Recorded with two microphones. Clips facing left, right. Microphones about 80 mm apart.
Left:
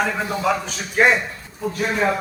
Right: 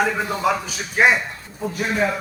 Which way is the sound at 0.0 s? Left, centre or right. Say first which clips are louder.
Right 1 dB; centre.